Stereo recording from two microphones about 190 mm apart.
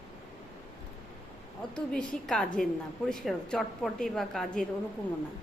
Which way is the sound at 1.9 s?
5° left (ahead or behind).